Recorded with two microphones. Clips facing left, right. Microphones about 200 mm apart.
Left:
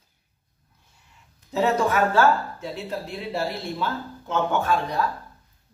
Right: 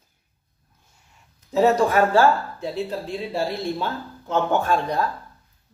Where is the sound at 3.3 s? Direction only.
30° right (ahead or behind).